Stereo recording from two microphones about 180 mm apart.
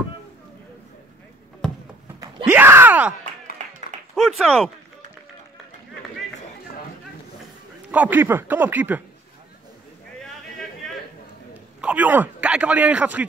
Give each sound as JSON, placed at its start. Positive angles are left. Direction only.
{"t": 2.4, "sound": "groan", "side_deg": -10}
{"t": 3.6, "sound": "a sound", "side_deg": -40}
{"t": 4.1, "sound": "speech", "side_deg": 0}
{"t": 7.9, "sound": "speech", "side_deg": -10}
{"t": 11.5, "sound": "a man's voice", "side_deg": -10}